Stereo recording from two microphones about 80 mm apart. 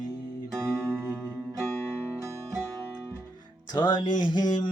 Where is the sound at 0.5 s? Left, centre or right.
Right.